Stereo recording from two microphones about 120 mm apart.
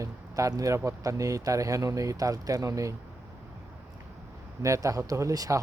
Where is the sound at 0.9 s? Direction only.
30° right (ahead or behind).